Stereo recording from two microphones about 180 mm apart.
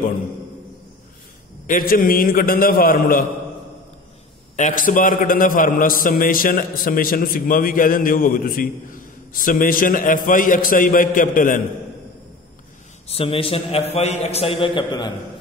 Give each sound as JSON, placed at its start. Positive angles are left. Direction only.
{"t": 1.7, "sound": "a man's voice", "side_deg": 50}
{"t": 4.6, "sound": "a man's voice", "side_deg": 45}
{"t": 13.1, "sound": "a man's voice", "side_deg": 30}